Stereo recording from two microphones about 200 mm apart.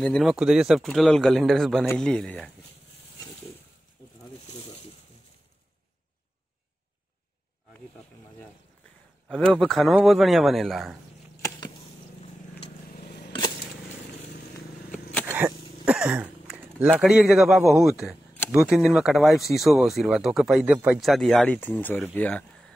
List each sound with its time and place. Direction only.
0.0 s speech: centre (ahead or behind)
9.3 s speech: 5° left (ahead or behind)
12.9 s a sound: 45° left (ahead or behind)
15.2 s speech: 10° right (ahead or behind); by 22.7 s 5° left (ahead or behind)